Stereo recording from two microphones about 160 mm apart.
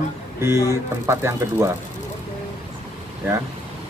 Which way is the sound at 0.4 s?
15° right (ahead or behind).